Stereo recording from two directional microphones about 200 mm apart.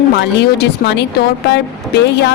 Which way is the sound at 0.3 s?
60° left (ahead or behind).